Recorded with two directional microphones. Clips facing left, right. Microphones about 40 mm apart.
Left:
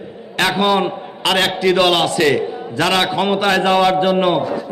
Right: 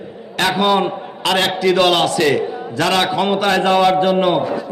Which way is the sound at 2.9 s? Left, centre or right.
Left.